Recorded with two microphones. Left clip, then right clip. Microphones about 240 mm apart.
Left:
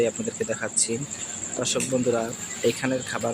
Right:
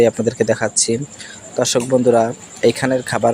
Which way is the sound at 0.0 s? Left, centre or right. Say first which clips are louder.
Right 11 dB; right.